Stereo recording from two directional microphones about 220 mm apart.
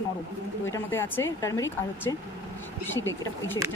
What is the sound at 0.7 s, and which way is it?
Speech, 10° left (ahead or behind).